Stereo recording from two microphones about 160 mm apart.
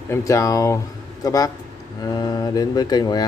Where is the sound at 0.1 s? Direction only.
20° left (ahead or behind).